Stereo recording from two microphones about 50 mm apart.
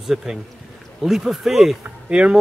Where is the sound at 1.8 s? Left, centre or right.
Right.